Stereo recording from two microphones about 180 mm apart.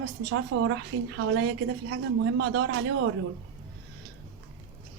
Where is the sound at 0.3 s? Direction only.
90° right.